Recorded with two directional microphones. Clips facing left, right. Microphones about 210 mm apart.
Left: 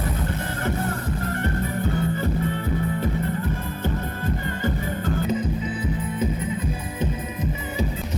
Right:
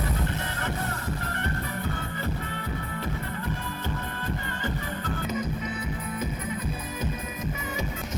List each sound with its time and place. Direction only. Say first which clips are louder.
5.3 s music: left 5 dB; 30° left (ahead or behind)